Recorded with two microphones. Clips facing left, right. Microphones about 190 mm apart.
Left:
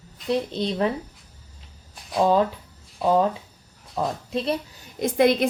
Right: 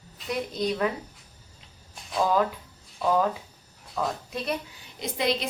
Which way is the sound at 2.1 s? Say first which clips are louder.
Left 4 dB; 25° left (ahead or behind).